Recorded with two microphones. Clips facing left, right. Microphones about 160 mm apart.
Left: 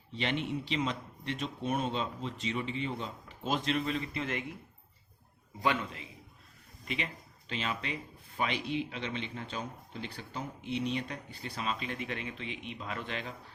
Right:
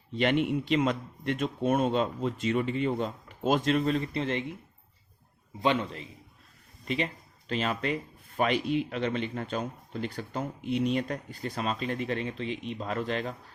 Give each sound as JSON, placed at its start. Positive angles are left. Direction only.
{"t": 0.1, "sound": "speech", "side_deg": -50}
{"t": 5.6, "sound": "a man's voice", "side_deg": -30}